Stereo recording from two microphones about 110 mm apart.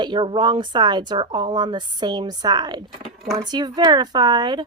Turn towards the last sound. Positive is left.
turn(degrees=-40)  # may be behind; listen again after turning